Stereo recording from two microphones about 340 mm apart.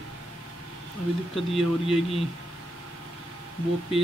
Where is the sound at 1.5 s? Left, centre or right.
Centre.